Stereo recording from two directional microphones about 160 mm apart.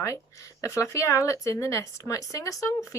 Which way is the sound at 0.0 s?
20° left (ahead or behind).